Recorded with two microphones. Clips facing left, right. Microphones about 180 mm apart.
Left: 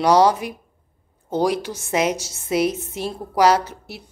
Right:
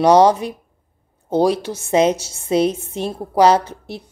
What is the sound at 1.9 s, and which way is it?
Speech, 30° right (ahead or behind).